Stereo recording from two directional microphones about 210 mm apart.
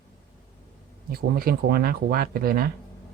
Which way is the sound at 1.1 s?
45° right (ahead or behind).